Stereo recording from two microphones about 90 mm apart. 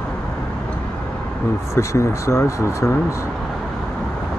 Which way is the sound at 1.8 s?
35° left (ahead or behind).